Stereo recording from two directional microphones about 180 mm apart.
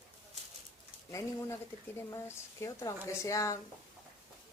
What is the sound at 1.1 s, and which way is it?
A woman's voice, 15° left (ahead or behind).